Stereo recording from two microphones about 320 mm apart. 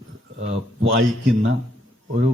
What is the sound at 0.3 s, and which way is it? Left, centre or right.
A man's voice, right.